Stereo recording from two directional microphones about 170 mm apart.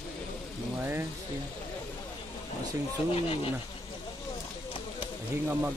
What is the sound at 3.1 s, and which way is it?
Speech, 35° left (ahead or behind).